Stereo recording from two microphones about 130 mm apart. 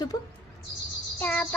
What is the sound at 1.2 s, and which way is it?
Bird, 10° left (ahead or behind).